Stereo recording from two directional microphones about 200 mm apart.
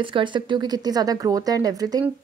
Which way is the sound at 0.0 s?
25° right (ahead or behind).